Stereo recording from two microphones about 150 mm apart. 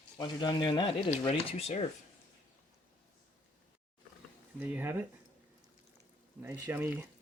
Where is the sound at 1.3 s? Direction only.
45° left (ahead or behind).